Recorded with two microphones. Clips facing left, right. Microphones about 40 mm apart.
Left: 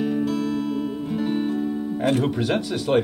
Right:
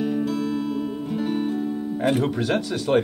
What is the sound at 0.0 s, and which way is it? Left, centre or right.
Music, centre.